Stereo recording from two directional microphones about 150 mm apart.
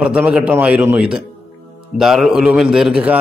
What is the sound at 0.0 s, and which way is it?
A man's voice, 10° right (ahead or behind).